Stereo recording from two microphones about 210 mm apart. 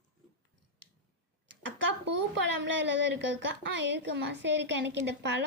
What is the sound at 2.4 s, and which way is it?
Speech, 60° right (ahead or behind).